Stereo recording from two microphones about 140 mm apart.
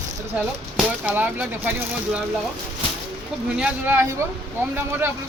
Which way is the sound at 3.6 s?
15° right (ahead or behind).